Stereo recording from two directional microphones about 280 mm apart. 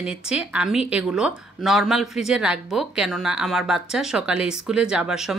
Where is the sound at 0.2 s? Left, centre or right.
Centre.